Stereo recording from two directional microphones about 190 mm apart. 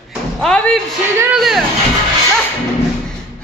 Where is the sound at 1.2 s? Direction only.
5° right (ahead or behind).